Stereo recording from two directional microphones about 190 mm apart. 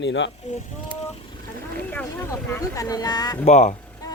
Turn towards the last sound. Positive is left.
turn(degrees=40)  # may be behind; listen again after turning